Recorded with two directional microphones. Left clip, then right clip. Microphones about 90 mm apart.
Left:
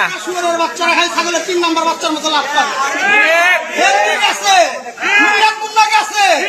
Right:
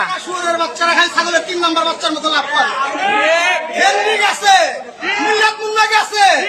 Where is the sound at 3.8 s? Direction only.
25° right (ahead or behind).